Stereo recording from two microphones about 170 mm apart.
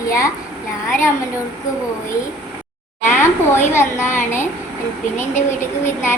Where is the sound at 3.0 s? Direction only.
15° left (ahead or behind).